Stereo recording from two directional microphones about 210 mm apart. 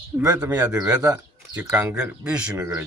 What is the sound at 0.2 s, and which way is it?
Speech, 10° right (ahead or behind).